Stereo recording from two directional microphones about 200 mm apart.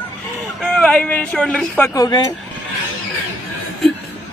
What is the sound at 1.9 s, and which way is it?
Speech, 15° left (ahead or behind).